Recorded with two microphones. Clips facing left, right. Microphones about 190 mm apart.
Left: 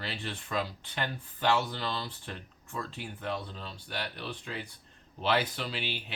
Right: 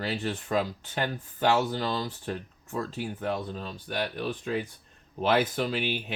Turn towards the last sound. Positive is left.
turn(degrees=-45)  # may be behind; listen again after turning